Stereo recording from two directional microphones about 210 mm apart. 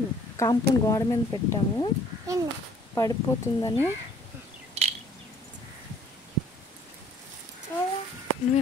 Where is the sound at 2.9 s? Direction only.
15° left (ahead or behind).